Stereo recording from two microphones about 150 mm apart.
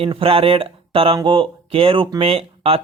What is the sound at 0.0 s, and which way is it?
Speech, 35° right (ahead or behind).